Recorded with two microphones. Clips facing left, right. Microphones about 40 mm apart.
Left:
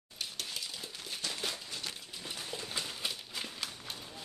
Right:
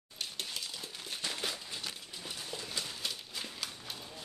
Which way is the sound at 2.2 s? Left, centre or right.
Left.